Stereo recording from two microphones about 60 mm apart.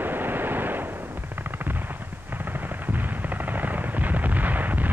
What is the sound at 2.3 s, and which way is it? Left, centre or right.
Machine gun, right.